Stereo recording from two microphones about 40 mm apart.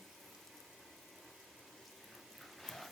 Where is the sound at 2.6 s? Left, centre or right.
Centre.